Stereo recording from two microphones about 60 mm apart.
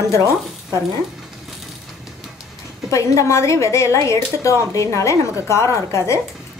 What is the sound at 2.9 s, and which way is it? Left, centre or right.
Speech, left.